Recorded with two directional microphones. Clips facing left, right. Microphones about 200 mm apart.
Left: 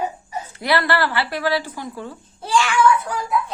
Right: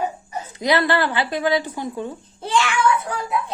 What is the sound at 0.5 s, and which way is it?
A woman's voice, 20° right (ahead or behind).